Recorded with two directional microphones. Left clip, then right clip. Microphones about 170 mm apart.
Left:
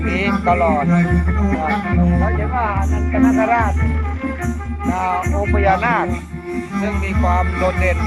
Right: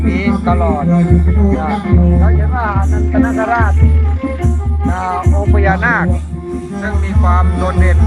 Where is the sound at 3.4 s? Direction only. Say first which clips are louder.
Right 2 dB; 10° left (ahead or behind).